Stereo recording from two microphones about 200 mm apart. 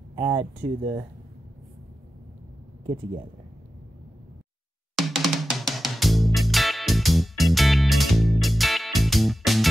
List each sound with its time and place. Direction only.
0.1 s speech: 20° right (ahead or behind)
4.9 s drum kit: centre (ahead or behind)